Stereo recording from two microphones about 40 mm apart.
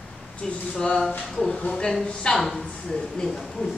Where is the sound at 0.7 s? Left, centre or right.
Centre.